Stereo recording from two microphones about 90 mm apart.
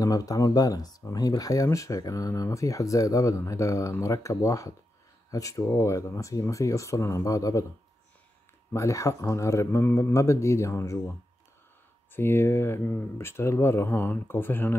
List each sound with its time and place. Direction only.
0.0 s speech: 40° left (ahead or behind)
8.7 s speech: 35° left (ahead or behind)